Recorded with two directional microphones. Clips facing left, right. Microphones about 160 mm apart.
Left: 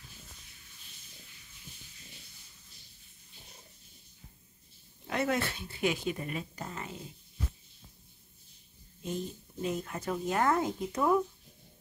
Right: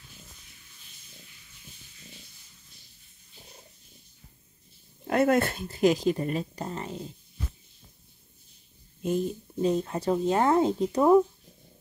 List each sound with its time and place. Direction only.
5.0 s a woman's voice: 50° right (ahead or behind); by 7.0 s 30° right (ahead or behind)
9.6 s a woman's voice: 30° right (ahead or behind)